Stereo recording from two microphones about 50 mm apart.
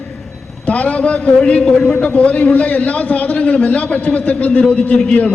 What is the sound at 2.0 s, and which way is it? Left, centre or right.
A man's voice, left.